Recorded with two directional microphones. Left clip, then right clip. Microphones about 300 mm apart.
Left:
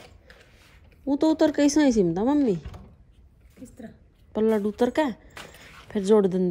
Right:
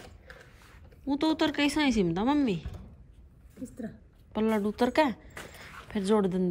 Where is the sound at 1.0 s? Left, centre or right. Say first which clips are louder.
Left 6 dB; centre.